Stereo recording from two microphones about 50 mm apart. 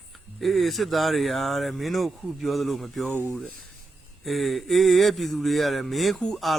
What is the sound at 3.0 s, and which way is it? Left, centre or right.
Speech, right.